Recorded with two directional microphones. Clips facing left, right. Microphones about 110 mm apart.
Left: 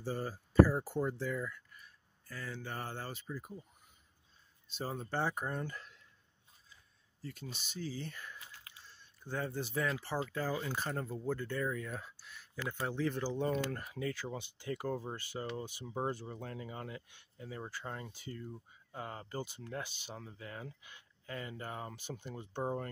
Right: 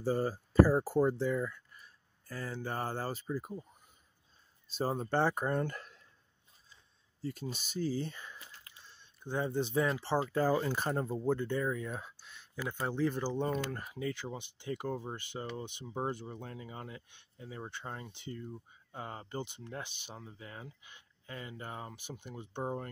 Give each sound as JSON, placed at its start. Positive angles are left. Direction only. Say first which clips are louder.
{"t": 0.0, "sound": "speech", "louder": "right 7 dB", "side_deg": -40}
{"t": 1.1, "sound": "speech", "louder": "right 5 dB", "side_deg": -25}
{"t": 4.6, "sound": "speech", "louder": "right 7 dB", "side_deg": -35}
{"t": 5.1, "sound": "speech", "louder": "right 5 dB", "side_deg": -85}
{"t": 7.2, "sound": "speech", "louder": "right 7 dB", "side_deg": -35}
{"t": 8.1, "sound": "speech", "louder": "even", "side_deg": -20}
{"t": 11.0, "sound": "speech", "louder": "right 5 dB", "side_deg": -25}